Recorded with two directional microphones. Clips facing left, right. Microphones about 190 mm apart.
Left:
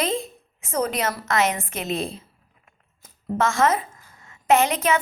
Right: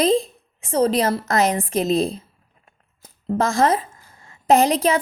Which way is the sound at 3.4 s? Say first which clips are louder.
Right 2 dB; 35° right (ahead or behind).